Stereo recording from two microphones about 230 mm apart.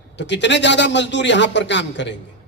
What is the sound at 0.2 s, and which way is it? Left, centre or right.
A man's voice, left.